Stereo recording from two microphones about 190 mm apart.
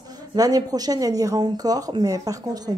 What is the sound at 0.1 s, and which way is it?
A woman's voice, 20° right (ahead or behind).